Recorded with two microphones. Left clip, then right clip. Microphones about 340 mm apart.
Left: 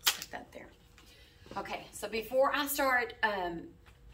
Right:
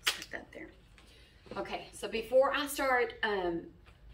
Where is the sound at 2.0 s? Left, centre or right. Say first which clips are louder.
Right 2 dB; centre.